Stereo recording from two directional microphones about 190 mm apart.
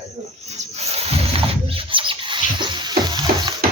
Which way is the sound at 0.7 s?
35° right (ahead or behind).